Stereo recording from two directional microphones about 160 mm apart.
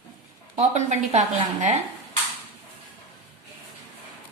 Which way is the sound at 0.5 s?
45° right (ahead or behind).